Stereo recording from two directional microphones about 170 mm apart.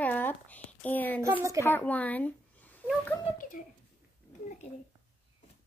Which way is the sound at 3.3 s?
55° left (ahead or behind).